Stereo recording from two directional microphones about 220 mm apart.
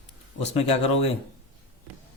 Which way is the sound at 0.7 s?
25° left (ahead or behind).